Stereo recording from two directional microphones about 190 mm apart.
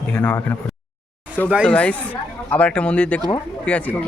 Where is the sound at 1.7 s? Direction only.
5° left (ahead or behind).